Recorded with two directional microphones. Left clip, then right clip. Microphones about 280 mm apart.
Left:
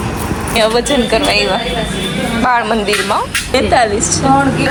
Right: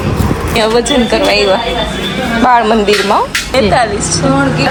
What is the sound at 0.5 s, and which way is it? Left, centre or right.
Speech, centre.